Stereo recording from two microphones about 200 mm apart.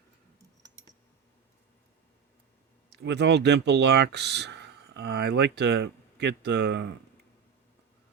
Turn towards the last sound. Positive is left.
turn(degrees=-60)  # may be behind; listen again after turning